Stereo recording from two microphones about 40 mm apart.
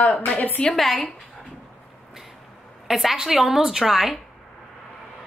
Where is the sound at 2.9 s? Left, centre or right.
Centre.